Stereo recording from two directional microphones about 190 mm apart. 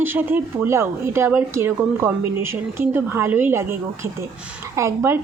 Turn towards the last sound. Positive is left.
turn(degrees=-15)  # may be behind; listen again after turning